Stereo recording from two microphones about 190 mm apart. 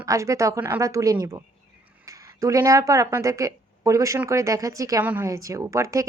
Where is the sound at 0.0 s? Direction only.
15° right (ahead or behind).